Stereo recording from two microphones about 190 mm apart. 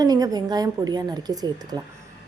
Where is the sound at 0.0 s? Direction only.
20° right (ahead or behind).